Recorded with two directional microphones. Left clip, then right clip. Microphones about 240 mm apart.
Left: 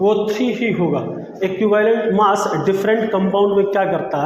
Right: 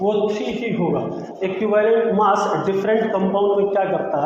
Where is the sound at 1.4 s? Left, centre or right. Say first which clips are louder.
Left 2 dB; left.